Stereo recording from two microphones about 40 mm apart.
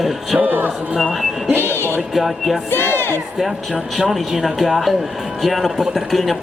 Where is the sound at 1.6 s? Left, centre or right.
Left.